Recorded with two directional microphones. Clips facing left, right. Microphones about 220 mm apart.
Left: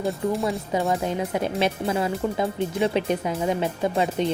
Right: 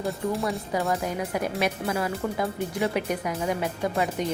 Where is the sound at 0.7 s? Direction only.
20° left (ahead or behind).